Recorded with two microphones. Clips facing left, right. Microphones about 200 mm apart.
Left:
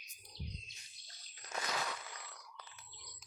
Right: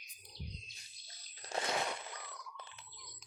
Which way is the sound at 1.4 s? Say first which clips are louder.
Right 4 dB; 30° right (ahead or behind).